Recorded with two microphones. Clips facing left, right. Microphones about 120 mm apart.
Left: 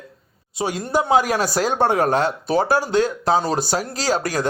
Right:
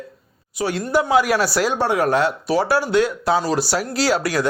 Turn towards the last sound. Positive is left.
turn(degrees=40)  # may be behind; listen again after turning